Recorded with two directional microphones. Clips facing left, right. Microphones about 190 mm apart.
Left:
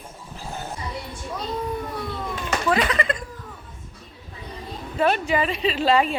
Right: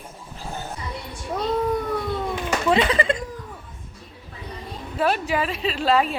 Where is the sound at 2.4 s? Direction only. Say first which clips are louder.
Right 2 dB; 25° right (ahead or behind).